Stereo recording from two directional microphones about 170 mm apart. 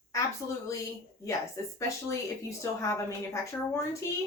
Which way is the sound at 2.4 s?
15° left (ahead or behind).